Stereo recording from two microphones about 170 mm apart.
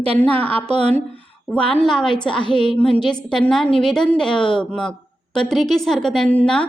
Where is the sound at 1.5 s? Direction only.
5° left (ahead or behind).